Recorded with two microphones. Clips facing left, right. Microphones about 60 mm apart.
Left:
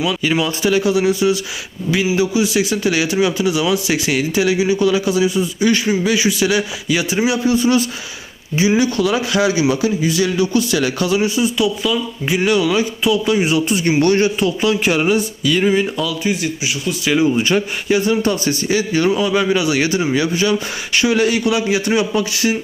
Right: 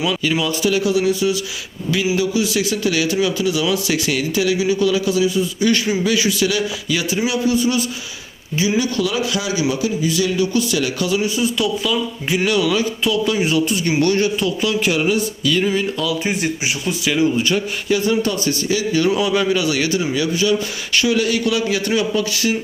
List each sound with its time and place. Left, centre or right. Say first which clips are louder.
0.3 s a man's voice: left 3 dB; left
2.1 s a man's voice: left 2 dB; centre
5.5 s a man's voice: left 2 dB; centre; by 11.3 s left
11.5 s speech: left 2 dB; centre
13.7 s a man's voice: left 3 dB; left
15.4 s a man's voice: left 3 dB; centre
16.2 s speech: left 1 dB; right
17.8 s a man's voice: left 1 dB; left
19.3 s speech: left 2 dB; centre
19.8 s a man's voice: left 2 dB; left